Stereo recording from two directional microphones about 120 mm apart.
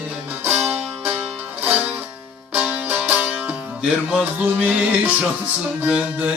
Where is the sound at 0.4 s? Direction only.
15° right (ahead or behind).